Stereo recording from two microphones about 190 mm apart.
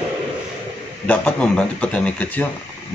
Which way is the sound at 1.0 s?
10° left (ahead or behind).